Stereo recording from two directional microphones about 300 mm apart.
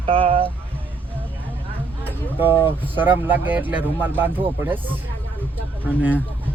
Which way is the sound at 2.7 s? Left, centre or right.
Centre.